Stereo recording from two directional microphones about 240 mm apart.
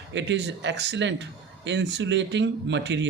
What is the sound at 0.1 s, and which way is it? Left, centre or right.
Speech, right.